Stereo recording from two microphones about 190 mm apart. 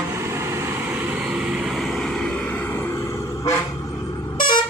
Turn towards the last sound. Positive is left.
turn(degrees=25)  # may be behind; listen again after turning